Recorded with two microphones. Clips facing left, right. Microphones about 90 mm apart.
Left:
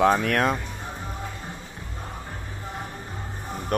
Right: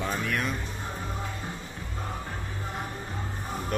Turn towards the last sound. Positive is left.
turn(degrees=55)  # may be behind; listen again after turning